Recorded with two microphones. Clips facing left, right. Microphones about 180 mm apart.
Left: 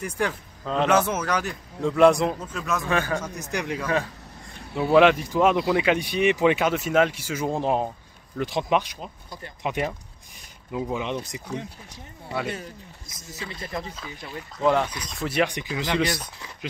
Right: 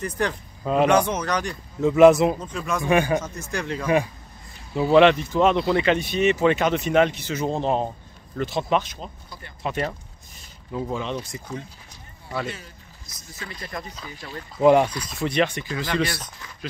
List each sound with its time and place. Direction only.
0.0 s a man's voice: 10° left (ahead or behind)
2.8 s a man's voice: 15° right (ahead or behind)
3.2 s speech: 15° left (ahead or behind)
3.8 s a man's voice: 15° right (ahead or behind)
4.6 s speech: centre (ahead or behind)
13.4 s speech: 20° left (ahead or behind)
13.9 s a man's voice: 5° left (ahead or behind)
14.6 s a man's voice: 15° right (ahead or behind)
15.0 s speech: centre (ahead or behind); by 16.3 s 15° left (ahead or behind)